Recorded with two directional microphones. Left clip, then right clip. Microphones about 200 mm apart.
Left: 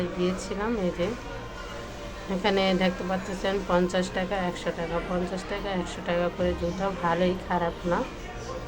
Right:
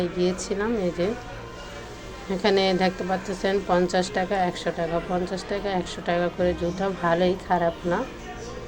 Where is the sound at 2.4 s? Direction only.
20° right (ahead or behind).